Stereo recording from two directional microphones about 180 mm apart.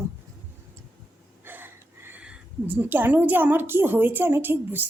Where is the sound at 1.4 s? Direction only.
10° right (ahead or behind).